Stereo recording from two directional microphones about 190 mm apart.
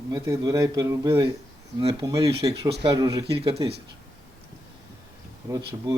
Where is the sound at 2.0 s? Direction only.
20° right (ahead or behind).